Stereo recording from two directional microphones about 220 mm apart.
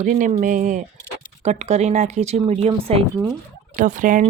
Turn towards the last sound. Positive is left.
turn(degrees=-35)  # may be behind; listen again after turning